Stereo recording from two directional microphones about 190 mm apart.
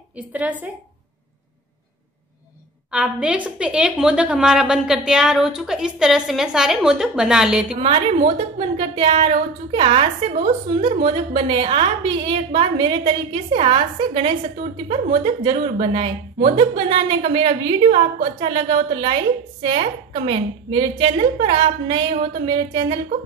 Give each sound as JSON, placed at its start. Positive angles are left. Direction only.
{"t": 0.3, "sound": "a woman's voice", "side_deg": -10}
{"t": 2.9, "sound": "a woman's voice", "side_deg": -5}
{"t": 7.8, "sound": "a woman's voice", "side_deg": -30}